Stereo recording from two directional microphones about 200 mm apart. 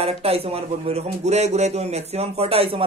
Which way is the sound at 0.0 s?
30° right (ahead or behind).